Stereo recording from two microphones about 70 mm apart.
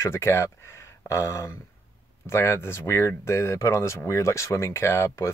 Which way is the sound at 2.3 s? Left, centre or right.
Left.